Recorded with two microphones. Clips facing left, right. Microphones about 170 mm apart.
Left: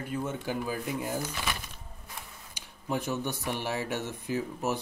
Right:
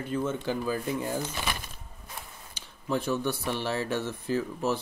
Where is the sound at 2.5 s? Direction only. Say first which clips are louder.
Right 2 dB; 15° left (ahead or behind).